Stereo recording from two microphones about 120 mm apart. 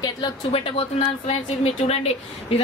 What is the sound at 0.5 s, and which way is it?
Speech, 55° left (ahead or behind).